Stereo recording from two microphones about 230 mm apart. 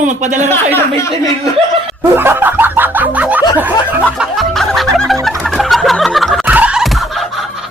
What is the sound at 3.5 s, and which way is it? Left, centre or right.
Music, centre.